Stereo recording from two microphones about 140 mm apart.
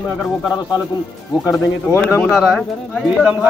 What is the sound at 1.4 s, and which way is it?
Speech, 20° left (ahead or behind).